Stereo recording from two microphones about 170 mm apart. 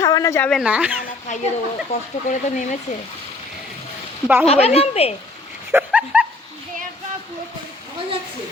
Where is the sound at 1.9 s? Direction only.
45° left (ahead or behind).